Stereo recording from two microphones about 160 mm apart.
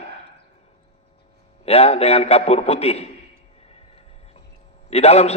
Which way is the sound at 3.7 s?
40° left (ahead or behind).